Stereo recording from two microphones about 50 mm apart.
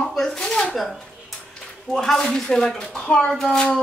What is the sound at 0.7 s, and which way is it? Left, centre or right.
A woman's voice, centre.